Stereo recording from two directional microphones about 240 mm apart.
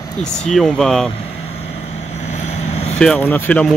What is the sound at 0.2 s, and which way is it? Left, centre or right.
Speech, centre.